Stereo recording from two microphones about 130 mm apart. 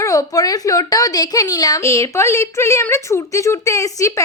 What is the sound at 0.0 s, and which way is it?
A woman's voice, 25° left (ahead or behind).